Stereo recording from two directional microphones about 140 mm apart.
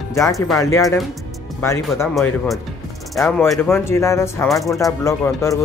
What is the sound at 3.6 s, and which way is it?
Speech, 20° left (ahead or behind).